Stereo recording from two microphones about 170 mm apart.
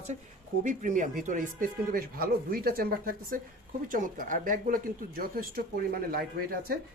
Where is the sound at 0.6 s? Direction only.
50° right (ahead or behind).